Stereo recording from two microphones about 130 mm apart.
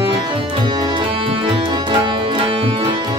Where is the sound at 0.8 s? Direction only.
40° right (ahead or behind).